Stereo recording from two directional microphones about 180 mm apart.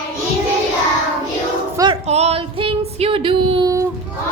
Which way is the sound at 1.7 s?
25° right (ahead or behind).